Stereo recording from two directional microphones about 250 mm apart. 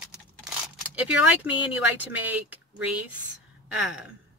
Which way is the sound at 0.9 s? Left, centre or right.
Centre.